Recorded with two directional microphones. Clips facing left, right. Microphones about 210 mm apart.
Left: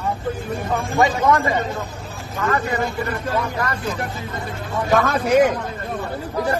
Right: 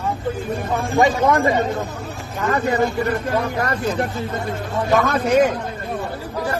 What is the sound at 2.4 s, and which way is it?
Speech, 35° right (ahead or behind).